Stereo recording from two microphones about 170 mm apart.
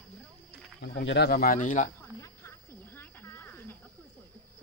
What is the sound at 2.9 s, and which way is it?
Snake, 15° left (ahead or behind).